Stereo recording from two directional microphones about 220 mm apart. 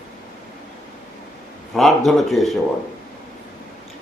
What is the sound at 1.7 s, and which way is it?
Speech, centre (ahead or behind).